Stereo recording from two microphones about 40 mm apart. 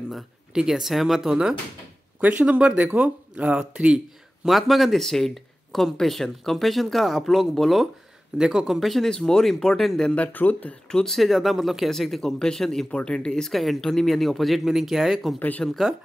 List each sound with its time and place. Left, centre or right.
0.6 s speech: centre
2.7 s speech: right
4.5 s speech: centre
8.4 s speech: centre
8.7 s speech: centre
10.1 s speech: left
10.9 s speech: centre
11.1 s speech: centre
12.9 s speech: left
13.3 s speech: centre
15.3 s speech: left